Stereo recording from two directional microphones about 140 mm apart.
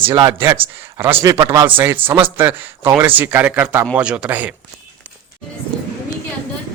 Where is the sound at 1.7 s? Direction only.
15° right (ahead or behind).